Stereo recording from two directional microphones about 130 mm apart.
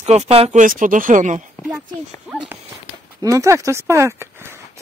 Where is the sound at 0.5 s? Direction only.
90° right; by 1.4 s 70° right (ahead or behind).